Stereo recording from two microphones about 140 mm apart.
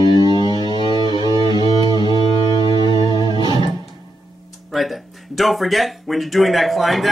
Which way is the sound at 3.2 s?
35° left (ahead or behind).